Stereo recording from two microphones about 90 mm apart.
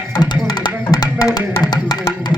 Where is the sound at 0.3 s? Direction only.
55° left (ahead or behind).